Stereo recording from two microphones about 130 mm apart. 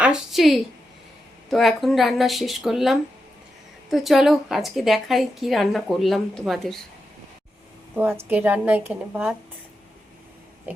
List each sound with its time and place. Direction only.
0.0 s a sound: 5° right (ahead or behind)
1.5 s a woman's voice: centre (ahead or behind)
7.9 s a woman's voice: 15° right (ahead or behind)